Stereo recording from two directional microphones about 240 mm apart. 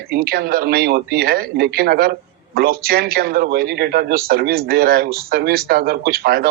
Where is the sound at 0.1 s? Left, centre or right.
Right.